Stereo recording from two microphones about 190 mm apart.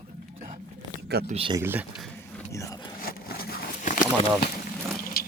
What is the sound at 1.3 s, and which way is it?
Speech, 30° right (ahead or behind).